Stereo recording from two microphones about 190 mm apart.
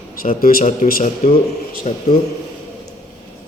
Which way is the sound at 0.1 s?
45° left (ahead or behind).